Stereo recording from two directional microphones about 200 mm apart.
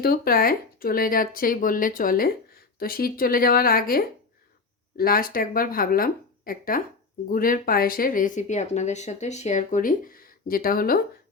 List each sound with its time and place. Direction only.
0.0 s speech: 45° left (ahead or behind)